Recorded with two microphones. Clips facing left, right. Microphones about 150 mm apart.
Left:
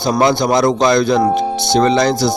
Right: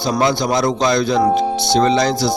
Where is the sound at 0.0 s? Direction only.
55° left (ahead or behind).